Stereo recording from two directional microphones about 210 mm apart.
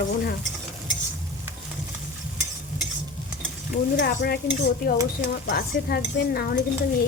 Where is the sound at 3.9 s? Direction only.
50° left (ahead or behind).